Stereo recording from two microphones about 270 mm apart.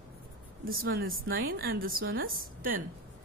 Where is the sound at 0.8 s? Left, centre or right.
Right.